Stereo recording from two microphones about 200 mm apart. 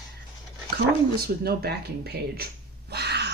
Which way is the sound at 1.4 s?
50° right (ahead or behind).